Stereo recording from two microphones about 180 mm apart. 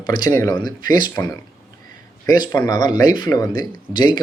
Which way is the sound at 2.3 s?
25° left (ahead or behind).